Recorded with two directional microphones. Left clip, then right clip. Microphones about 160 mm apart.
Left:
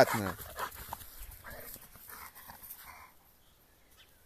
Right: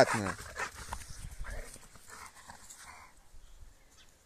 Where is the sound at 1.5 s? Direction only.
15° right (ahead or behind).